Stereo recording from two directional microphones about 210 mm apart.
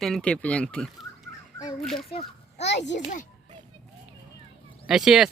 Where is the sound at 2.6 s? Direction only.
55° left (ahead or behind).